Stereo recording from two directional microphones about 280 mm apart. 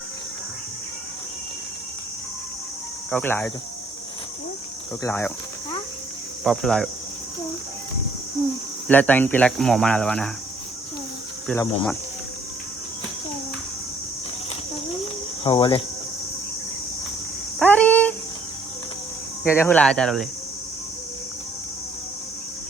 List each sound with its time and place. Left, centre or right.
3.1 s speech: centre
5.0 s speech: centre
6.4 s speech: centre
8.9 s speech: centre
11.4 s speech: centre
15.4 s speech: centre
17.6 s a sound: centre
19.5 s speech: centre